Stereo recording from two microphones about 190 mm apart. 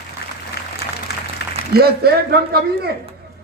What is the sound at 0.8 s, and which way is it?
Applause, 60° left (ahead or behind).